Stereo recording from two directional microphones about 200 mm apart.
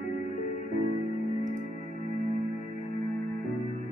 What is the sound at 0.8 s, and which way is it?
Music, 40° left (ahead or behind).